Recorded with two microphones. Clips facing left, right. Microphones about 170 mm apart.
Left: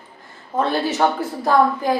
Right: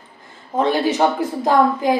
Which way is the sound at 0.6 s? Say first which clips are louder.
Right 2 dB; 15° right (ahead or behind).